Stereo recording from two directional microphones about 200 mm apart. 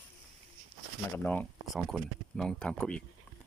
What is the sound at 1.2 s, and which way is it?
Speech, 10° left (ahead or behind).